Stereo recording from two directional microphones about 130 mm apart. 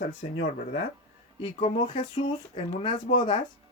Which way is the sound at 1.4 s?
40° left (ahead or behind).